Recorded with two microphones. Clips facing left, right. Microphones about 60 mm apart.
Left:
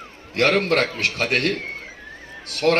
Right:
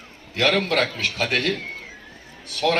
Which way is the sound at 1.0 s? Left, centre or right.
Left.